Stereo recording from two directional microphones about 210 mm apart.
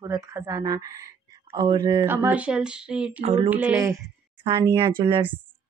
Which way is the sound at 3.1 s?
30° right (ahead or behind).